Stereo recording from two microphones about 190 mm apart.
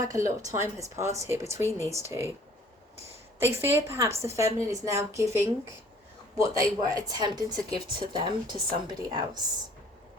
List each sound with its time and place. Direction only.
0.0 s a woman's voice: 20° right (ahead or behind)
3.4 s a woman's voice: 15° right (ahead or behind)